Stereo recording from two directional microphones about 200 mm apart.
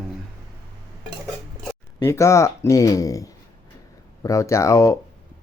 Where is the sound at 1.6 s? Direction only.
15° left (ahead or behind).